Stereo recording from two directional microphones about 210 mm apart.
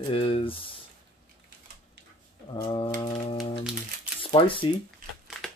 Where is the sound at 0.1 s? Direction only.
25° left (ahead or behind).